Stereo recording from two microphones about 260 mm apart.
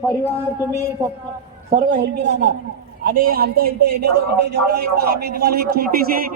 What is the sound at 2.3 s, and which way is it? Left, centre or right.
A man's voice, right.